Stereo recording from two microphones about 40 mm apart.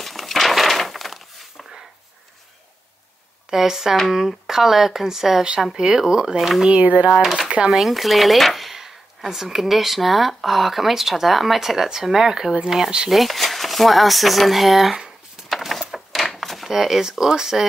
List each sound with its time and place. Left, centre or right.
0.0 s a sound: centre
3.4 s speech: centre
6.8 s speech: right
7.7 s speech: centre
15.4 s a sound: centre
16.7 s speech: centre